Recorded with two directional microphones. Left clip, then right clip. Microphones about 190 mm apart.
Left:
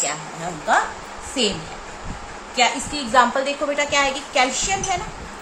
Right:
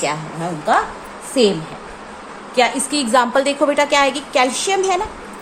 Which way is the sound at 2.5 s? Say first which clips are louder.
Right 3 dB; 55° right (ahead or behind).